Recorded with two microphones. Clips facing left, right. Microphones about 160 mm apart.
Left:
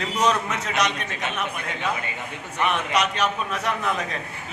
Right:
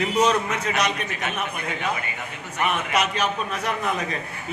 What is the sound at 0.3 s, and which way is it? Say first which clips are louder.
A man's voice: right 1 dB; centre (ahead or behind).